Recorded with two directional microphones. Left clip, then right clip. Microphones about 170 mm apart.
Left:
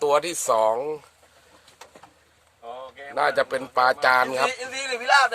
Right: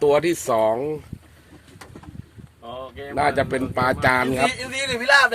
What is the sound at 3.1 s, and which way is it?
Speech, 35° left (ahead or behind).